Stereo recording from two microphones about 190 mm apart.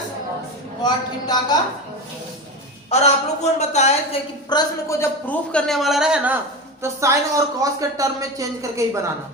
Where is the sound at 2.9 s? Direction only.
35° left (ahead or behind).